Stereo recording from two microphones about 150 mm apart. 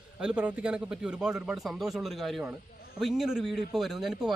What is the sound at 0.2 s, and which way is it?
Speech, 5° right (ahead or behind).